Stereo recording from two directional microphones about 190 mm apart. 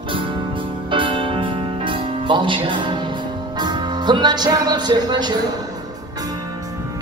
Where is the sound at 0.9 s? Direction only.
25° right (ahead or behind).